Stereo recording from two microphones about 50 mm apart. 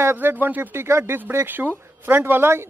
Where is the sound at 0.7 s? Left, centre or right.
Right.